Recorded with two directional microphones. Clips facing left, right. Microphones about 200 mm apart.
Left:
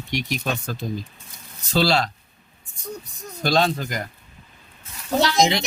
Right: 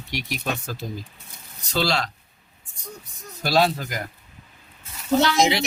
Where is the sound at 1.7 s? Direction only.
30° left (ahead or behind).